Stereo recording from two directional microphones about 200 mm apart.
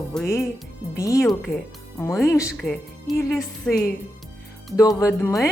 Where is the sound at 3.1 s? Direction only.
15° left (ahead or behind).